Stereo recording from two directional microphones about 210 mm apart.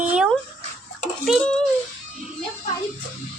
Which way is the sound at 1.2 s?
Centre (ahead or behind).